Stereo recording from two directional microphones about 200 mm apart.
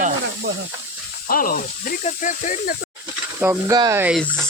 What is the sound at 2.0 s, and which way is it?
Speech, 40° left (ahead or behind).